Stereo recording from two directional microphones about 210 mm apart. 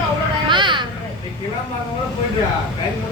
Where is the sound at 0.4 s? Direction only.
25° right (ahead or behind).